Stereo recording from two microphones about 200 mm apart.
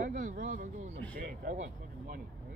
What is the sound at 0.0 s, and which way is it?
Speech, 40° right (ahead or behind).